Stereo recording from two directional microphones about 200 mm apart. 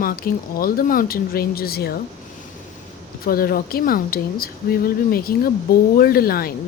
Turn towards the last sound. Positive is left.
turn(degrees=50)  # may be behind; listen again after turning